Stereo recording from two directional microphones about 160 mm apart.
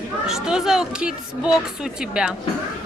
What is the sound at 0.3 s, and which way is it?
Speech, 5° right (ahead or behind).